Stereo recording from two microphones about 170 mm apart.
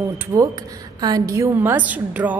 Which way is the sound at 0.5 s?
25° right (ahead or behind).